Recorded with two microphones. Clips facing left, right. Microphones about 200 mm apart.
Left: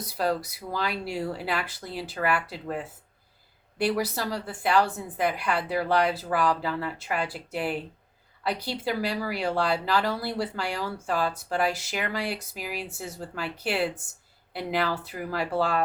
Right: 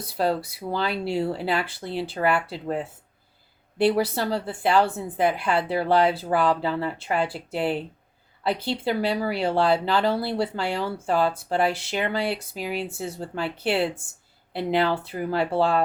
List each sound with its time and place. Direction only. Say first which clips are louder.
0.0 s a woman's voice: right 3 dB; 25° right (ahead or behind)